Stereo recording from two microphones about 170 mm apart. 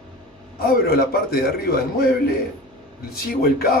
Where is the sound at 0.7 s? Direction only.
65° left (ahead or behind).